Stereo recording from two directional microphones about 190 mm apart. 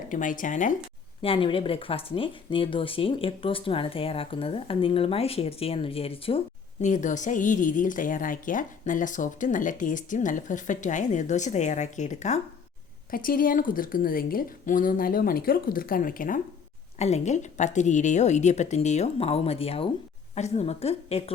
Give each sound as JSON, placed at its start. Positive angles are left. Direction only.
{"t": 0.1, "sound": "a woman's voice", "side_deg": 45}
{"t": 1.2, "sound": "speech", "side_deg": 30}
{"t": 6.8, "sound": "a woman's voice", "side_deg": 40}
{"t": 13.1, "sound": "a woman's voice", "side_deg": 50}
{"t": 17.0, "sound": "a woman's voice", "side_deg": 35}